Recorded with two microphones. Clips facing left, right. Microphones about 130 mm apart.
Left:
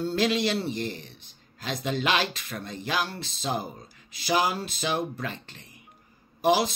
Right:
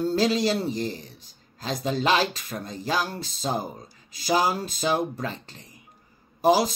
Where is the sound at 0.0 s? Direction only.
35° right (ahead or behind).